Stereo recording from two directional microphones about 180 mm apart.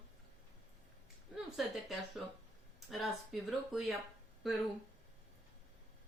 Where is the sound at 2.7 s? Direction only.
Centre (ahead or behind).